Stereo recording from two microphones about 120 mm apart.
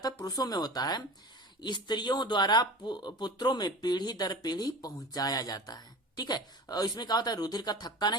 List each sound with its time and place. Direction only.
0.0 s speech: 30° left (ahead or behind)